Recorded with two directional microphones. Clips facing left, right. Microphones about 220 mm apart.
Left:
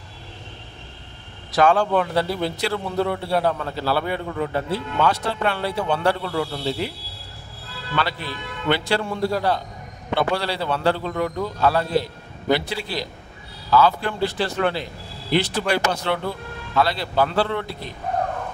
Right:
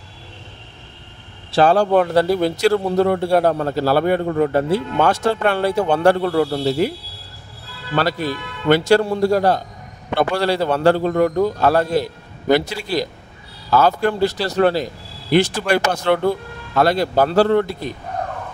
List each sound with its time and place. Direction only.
1.5 s a man's voice: 35° right (ahead or behind)
7.9 s a man's voice: 40° right (ahead or behind)